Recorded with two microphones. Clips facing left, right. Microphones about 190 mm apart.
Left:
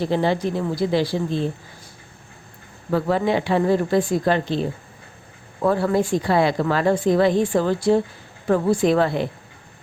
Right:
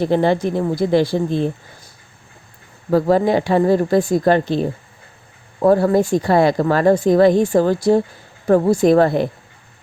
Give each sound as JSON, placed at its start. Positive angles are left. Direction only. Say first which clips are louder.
{"t": 0.0, "sound": "a woman's voice", "louder": "right 4 dB", "side_deg": -55}
{"t": 2.9, "sound": "a woman's voice", "louder": "right 5 dB", "side_deg": -40}
{"t": 5.6, "sound": "a woman's voice", "louder": "right 6 dB", "side_deg": -40}